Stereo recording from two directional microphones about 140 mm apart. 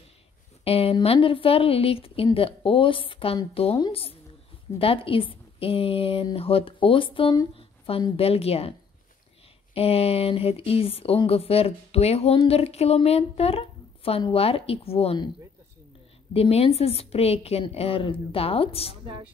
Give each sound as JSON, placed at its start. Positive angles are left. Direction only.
{"t": 0.7, "sound": "speech", "side_deg": 45}
{"t": 9.8, "sound": "speech", "side_deg": 45}
{"t": 16.3, "sound": "speech", "side_deg": 45}